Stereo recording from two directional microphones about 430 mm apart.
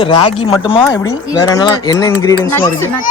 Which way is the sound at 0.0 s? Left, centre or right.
Centre.